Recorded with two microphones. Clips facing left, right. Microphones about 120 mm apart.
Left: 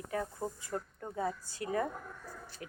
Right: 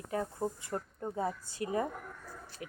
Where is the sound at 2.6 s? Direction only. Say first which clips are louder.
Right 3 dB; 35° left (ahead or behind).